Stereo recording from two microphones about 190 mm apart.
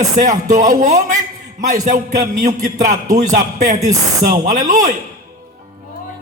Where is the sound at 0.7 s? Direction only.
40° right (ahead or behind).